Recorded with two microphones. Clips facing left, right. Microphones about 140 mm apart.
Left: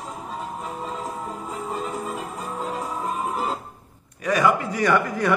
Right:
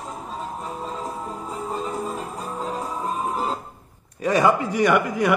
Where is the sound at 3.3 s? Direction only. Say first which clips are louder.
Right 1 dB; 35° right (ahead or behind).